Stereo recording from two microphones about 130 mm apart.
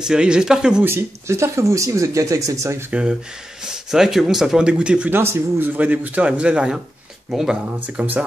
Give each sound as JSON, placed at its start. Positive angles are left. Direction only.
{"t": 0.0, "sound": "speech", "side_deg": -5}
{"t": 0.8, "sound": "speech", "side_deg": -20}
{"t": 2.9, "sound": "speech", "side_deg": -5}